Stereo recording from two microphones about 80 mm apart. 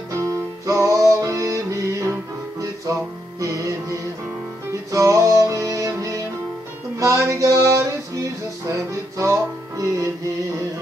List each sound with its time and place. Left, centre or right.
0.1 s music: right
7.0 s a sound: right
9.2 s music: right